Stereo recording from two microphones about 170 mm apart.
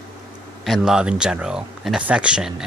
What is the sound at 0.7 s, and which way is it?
Speech, 5° right (ahead or behind).